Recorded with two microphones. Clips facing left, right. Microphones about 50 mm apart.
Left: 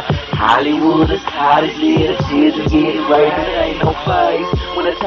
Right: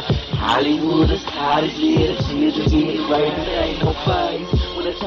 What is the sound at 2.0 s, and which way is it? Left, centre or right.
Music, left.